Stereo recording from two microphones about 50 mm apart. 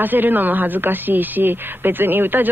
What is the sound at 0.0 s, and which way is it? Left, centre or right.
Speech, right.